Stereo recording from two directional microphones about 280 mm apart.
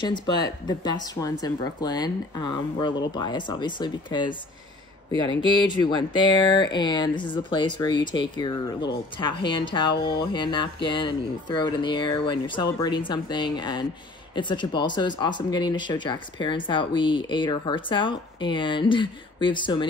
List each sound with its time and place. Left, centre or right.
0.0 s speech: centre
5.5 s speech: centre